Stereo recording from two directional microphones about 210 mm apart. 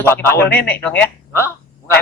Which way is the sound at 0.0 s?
10° left (ahead or behind).